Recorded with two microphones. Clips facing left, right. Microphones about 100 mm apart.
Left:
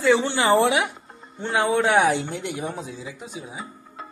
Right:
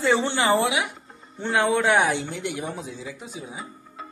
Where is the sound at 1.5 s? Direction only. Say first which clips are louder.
Left 1 dB; 15° left (ahead or behind).